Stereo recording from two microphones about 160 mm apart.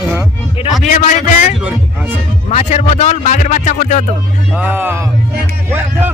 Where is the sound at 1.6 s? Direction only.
10° right (ahead or behind).